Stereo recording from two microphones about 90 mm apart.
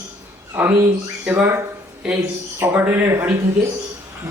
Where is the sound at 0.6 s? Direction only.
15° right (ahead or behind).